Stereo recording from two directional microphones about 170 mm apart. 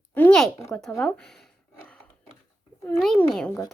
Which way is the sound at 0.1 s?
10° left (ahead or behind).